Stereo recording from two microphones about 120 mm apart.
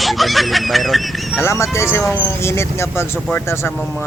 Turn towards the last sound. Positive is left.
turn(degrees=15)  # may be behind; listen again after turning